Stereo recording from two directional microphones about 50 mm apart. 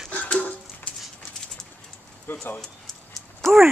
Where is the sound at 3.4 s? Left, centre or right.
Centre.